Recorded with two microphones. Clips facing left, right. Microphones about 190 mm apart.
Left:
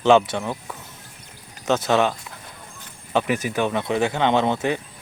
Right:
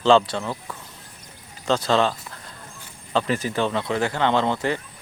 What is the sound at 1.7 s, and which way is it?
Speech, 15° left (ahead or behind).